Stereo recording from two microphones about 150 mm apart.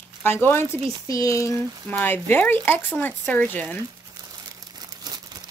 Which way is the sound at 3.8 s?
25° right (ahead or behind).